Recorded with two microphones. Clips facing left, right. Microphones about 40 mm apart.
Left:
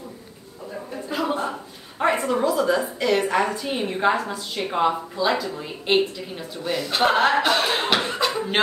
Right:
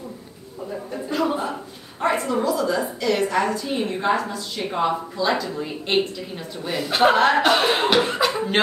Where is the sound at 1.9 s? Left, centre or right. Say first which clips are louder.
Left 1 dB; left.